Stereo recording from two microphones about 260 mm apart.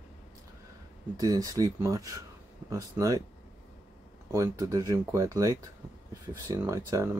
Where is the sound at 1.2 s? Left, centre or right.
Centre.